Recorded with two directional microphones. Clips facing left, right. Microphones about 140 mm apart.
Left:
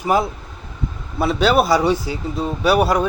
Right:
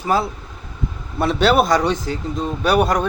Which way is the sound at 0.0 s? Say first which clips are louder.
Left 1 dB; 15° left (ahead or behind).